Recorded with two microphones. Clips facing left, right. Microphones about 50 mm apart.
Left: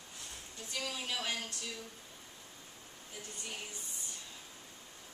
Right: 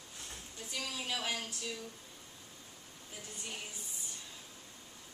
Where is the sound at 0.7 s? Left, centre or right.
Centre.